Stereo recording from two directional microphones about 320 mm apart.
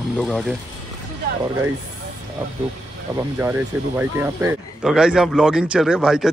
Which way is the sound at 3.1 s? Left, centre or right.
Centre.